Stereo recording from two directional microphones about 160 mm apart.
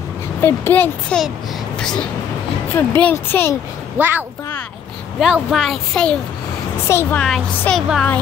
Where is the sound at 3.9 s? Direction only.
10° right (ahead or behind); by 7.8 s 5° left (ahead or behind).